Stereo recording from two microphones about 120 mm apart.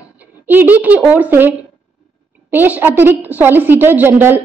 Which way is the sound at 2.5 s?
15° right (ahead or behind).